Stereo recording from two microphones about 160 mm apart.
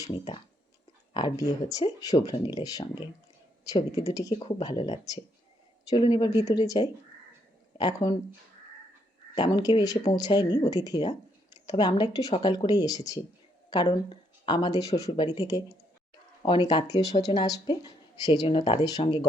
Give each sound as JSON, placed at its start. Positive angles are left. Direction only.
{"t": 0.0, "sound": "speech", "side_deg": 25}
{"t": 4.4, "sound": "speech", "side_deg": 35}
{"t": 9.3, "sound": "speech", "side_deg": 25}